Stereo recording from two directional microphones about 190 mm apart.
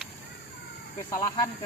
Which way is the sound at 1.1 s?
15° left (ahead or behind).